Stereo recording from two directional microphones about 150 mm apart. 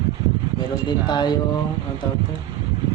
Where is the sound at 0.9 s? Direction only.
30° left (ahead or behind).